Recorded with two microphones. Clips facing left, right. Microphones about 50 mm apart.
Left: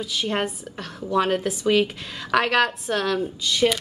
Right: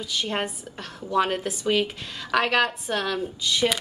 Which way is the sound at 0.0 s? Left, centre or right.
Centre.